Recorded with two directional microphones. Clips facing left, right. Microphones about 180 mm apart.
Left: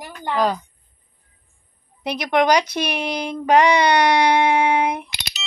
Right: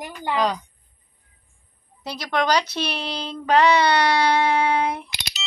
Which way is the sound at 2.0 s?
20° left (ahead or behind).